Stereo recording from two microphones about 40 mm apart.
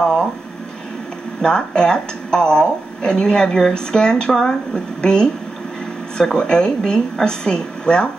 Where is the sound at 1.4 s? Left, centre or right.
Centre.